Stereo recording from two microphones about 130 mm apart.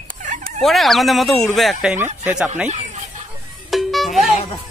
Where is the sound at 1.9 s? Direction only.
15° right (ahead or behind).